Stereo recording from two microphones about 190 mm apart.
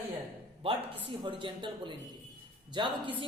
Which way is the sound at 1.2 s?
25° right (ahead or behind).